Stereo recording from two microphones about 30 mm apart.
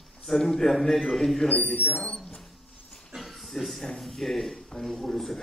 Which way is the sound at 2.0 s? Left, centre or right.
Left.